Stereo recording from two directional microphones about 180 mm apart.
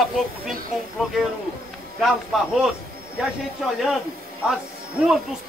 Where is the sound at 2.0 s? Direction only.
Centre (ahead or behind).